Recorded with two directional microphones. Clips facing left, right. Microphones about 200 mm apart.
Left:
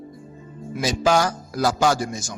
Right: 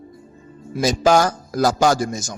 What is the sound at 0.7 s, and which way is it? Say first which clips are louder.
A man's voice: right 4 dB; 45° right (ahead or behind).